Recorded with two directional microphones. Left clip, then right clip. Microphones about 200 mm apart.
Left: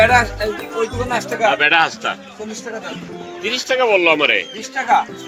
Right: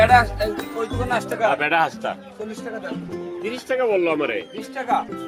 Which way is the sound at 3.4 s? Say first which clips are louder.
Left 6 dB; 50° right (ahead or behind).